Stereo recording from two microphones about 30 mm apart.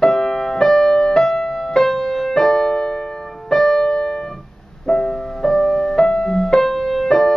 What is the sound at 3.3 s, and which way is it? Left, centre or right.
Keyboard, centre.